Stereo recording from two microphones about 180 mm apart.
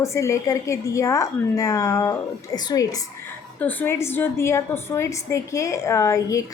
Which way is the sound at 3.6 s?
10° left (ahead or behind).